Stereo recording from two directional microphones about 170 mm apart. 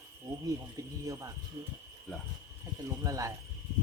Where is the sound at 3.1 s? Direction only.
20° right (ahead or behind).